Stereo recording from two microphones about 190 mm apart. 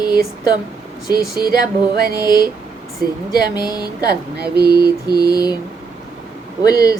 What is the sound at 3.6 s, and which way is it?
Speech, 20° left (ahead or behind).